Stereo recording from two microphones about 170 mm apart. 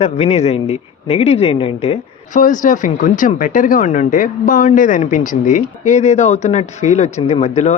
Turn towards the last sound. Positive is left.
turn(degrees=40)  # may be behind; listen again after turning